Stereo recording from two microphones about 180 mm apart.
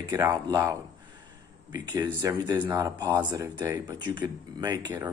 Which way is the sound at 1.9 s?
20° right (ahead or behind).